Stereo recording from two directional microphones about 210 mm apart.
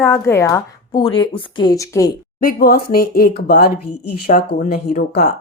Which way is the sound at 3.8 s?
90° left.